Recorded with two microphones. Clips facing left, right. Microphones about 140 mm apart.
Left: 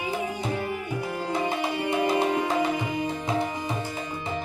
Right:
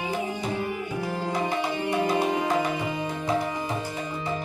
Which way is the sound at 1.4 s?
25° left (ahead or behind).